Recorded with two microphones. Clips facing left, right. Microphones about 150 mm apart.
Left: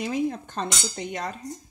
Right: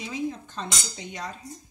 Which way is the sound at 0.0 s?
60° left (ahead or behind).